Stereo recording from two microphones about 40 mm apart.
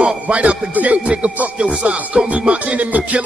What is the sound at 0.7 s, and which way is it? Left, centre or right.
Music, right.